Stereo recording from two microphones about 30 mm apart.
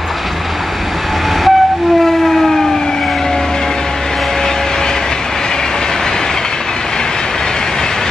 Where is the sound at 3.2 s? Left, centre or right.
Left.